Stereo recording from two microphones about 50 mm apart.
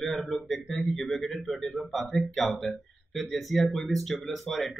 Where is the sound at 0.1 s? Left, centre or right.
Centre.